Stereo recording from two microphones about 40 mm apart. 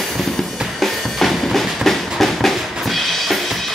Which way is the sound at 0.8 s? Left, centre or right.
Centre.